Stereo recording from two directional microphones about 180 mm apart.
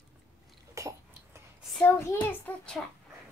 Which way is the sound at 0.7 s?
15° right (ahead or behind).